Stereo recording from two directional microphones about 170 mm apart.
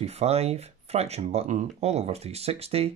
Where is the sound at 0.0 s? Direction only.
40° right (ahead or behind).